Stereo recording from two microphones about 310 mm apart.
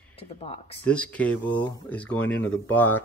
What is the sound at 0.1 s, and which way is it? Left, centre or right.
Speech, centre.